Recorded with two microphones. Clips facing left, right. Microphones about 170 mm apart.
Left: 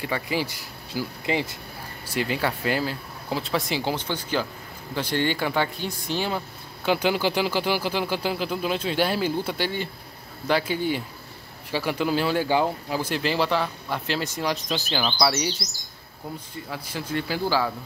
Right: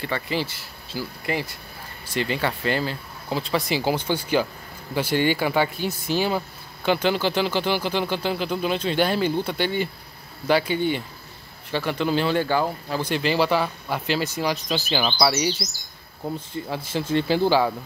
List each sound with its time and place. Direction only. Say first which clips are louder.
0.0 s speech: even; 10° left (ahead or behind)
2.0 s speech: right 1 dB; 5° left (ahead or behind)
6.9 s speech: right 1 dB; 10° left (ahead or behind)
16.3 s speech: right 5 dB; 25° right (ahead or behind)